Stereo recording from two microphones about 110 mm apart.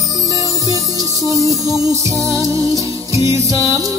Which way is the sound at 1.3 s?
30° right (ahead or behind).